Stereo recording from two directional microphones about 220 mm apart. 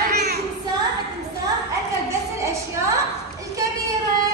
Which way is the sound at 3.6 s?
15° right (ahead or behind).